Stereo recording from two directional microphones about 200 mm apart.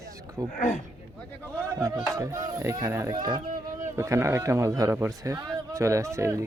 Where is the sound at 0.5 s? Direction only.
35° left (ahead or behind).